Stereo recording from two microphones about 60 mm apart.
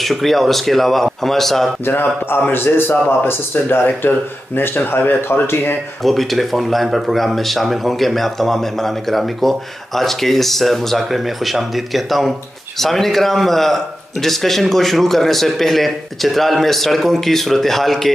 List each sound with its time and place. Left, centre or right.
0.0 s speech: centre
1.9 s speech: left
6.0 s speech: centre